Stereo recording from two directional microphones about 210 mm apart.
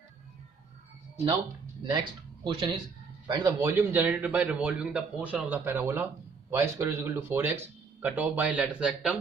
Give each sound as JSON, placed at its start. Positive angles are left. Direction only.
{"t": 1.8, "sound": "a man's voice", "side_deg": -25}